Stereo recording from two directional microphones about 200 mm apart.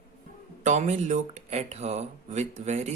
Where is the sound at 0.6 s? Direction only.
35° right (ahead or behind).